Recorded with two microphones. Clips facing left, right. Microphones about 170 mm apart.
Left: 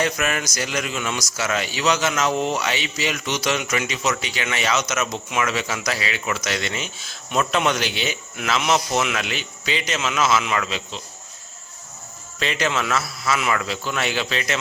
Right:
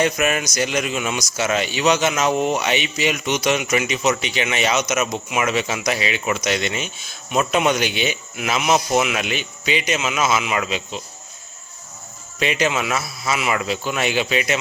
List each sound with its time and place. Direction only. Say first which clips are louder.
0.0 s a man's voice: right 4 dB; 20° right (ahead or behind)
12.4 s a man's voice: right 3 dB; 15° right (ahead or behind)